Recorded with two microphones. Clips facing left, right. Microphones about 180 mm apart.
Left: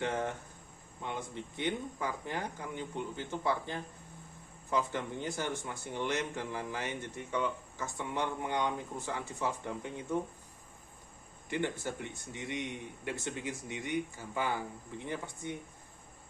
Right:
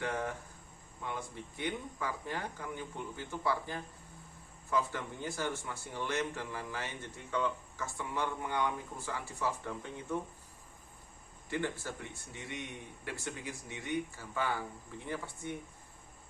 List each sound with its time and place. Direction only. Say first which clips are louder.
0.0 s speech: left 2 dB; 20° left (ahead or behind)
11.4 s speech: left 2 dB; 20° left (ahead or behind)